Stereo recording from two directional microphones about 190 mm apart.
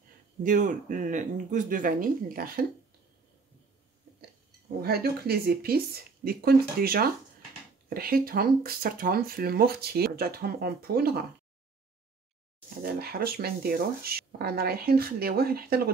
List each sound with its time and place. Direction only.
0.4 s speech: 40° right (ahead or behind)
4.8 s speech: 55° right (ahead or behind)
12.6 s speech: 55° right (ahead or behind)